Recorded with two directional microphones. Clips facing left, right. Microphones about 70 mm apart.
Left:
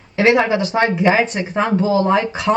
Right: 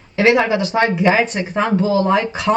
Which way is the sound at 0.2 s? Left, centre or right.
Left.